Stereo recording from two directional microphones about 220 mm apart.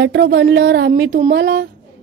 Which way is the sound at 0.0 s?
55° right (ahead or behind).